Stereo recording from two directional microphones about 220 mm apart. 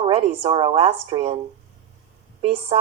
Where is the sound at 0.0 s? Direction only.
25° right (ahead or behind).